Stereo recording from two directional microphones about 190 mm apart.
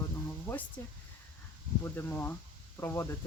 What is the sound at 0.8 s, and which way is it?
Speech, 10° left (ahead or behind).